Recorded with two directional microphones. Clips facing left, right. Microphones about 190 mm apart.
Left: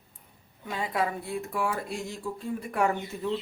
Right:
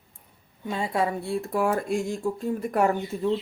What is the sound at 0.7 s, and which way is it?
Speech, 30° right (ahead or behind).